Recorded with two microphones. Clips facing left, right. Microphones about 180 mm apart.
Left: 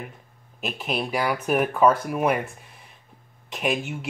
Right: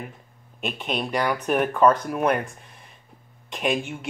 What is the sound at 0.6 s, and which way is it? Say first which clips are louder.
Speech: even; centre (ahead or behind).